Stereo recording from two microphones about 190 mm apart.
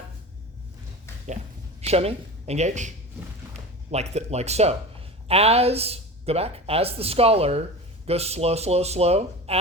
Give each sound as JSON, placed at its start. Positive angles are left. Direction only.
{"t": 1.8, "sound": "speech", "side_deg": -30}
{"t": 3.9, "sound": "speech", "side_deg": -35}